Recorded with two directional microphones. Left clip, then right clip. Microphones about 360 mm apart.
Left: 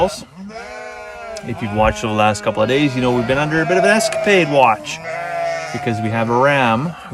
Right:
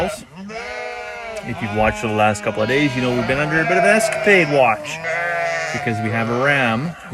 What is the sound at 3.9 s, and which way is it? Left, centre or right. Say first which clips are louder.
Speech: even; centre.